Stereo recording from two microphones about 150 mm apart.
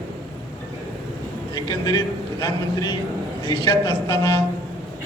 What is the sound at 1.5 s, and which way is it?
A man's voice, 25° left (ahead or behind).